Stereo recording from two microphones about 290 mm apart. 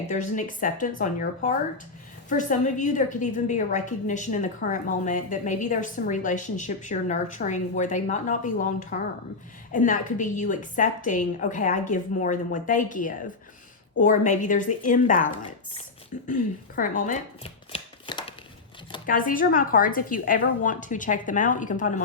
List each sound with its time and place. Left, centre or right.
0.1 s a woman's voice: left
16.2 s a sound: left
19.0 s a woman's voice: left